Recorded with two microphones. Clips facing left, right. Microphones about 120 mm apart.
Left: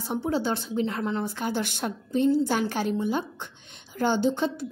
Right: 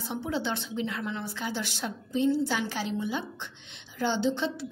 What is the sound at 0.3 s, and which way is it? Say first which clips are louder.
A woman's voice: left 4 dB; 40° left (ahead or behind).